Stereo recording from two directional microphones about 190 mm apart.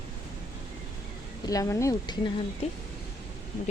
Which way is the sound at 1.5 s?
15° left (ahead or behind).